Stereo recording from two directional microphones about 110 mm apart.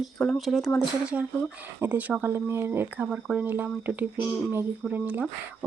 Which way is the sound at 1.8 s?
15° right (ahead or behind).